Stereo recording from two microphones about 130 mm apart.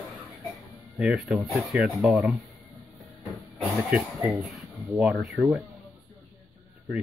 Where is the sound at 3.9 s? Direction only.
Centre (ahead or behind).